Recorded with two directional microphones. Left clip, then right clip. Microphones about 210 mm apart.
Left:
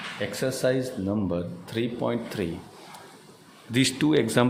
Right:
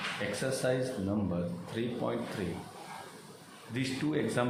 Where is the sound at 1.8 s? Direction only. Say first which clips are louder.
Left 7 dB; 45° left (ahead or behind).